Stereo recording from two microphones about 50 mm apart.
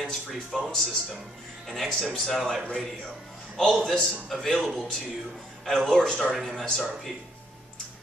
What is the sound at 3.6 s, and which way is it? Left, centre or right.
Speech, centre.